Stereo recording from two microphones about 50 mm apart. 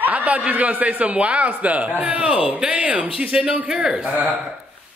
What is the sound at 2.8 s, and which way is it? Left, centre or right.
A man's voice, right.